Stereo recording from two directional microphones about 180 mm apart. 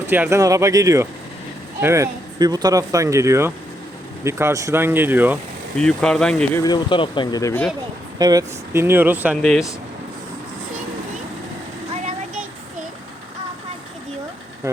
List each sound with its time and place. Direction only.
0.1 s speech: 15° right (ahead or behind)
5.7 s speech: 5° left (ahead or behind)
6.6 s speech: 25° left (ahead or behind)
8.2 s speech: 20° right (ahead or behind)
9.4 s speech: centre (ahead or behind)